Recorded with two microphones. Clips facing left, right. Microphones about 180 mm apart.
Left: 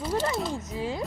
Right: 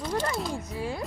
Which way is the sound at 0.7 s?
20° left (ahead or behind).